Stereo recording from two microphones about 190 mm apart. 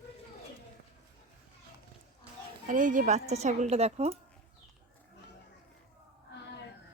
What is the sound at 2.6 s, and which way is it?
A woman's voice, 45° right (ahead or behind).